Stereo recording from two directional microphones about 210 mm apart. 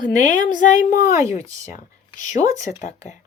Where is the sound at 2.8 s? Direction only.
35° left (ahead or behind).